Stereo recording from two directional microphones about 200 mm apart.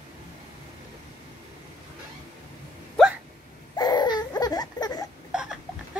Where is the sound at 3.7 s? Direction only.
20° left (ahead or behind).